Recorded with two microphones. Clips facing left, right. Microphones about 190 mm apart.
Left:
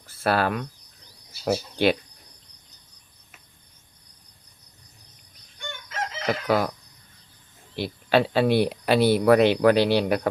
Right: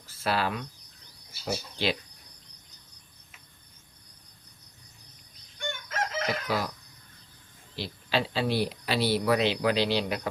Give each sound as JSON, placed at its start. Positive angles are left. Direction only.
{"t": 0.2, "sound": "speech", "side_deg": 55}
{"t": 5.5, "sound": "chicken", "side_deg": -50}
{"t": 6.2, "sound": "chicken", "side_deg": 55}
{"t": 7.8, "sound": "speech", "side_deg": 55}